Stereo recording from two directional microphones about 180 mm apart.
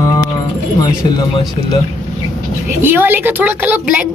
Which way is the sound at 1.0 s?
20° left (ahead or behind).